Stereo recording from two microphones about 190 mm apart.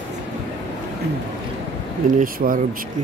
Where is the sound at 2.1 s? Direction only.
45° right (ahead or behind).